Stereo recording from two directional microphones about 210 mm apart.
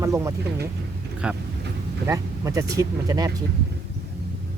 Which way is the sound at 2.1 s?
15° right (ahead or behind).